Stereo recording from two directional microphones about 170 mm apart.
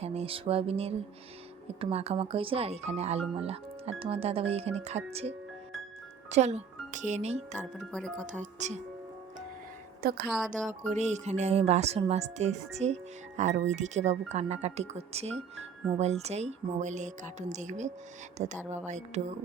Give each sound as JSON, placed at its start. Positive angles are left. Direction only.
{"t": 0.0, "sound": "music", "side_deg": -35}
{"t": 1.8, "sound": "speech", "side_deg": -35}
{"t": 6.3, "sound": "speech", "side_deg": -40}
{"t": 7.8, "sound": "speech", "side_deg": 5}
{"t": 8.3, "sound": "speech", "side_deg": -45}
{"t": 10.0, "sound": "a woman's voice", "side_deg": -65}
{"t": 10.2, "sound": "speech", "side_deg": 0}
{"t": 10.7, "sound": "speech", "side_deg": -45}